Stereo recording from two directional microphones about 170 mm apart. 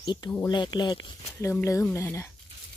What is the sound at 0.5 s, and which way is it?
Speech, 25° left (ahead or behind).